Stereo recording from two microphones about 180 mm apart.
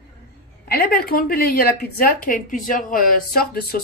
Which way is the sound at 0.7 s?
55° left (ahead or behind).